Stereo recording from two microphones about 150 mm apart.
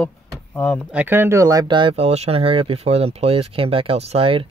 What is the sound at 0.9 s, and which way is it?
Speech, 10° right (ahead or behind).